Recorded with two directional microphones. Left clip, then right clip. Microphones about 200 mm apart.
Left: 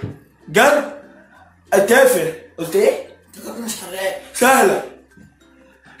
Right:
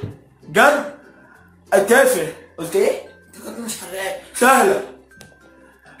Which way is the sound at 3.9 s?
10° left (ahead or behind).